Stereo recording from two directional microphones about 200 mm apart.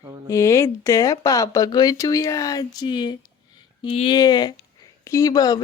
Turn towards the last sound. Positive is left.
turn(degrees=20)  # may be behind; listen again after turning